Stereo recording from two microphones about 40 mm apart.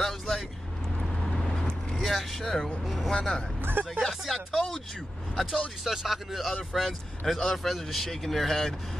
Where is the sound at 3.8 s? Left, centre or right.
Right.